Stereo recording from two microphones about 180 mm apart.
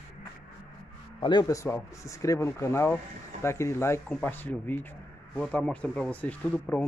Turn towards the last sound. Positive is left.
turn(degrees=5)  # may be behind; listen again after turning